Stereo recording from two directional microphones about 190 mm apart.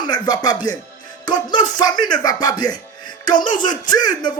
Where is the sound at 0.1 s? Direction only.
20° left (ahead or behind).